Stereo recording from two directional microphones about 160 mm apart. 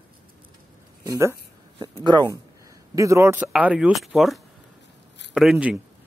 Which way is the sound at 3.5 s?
5° right (ahead or behind).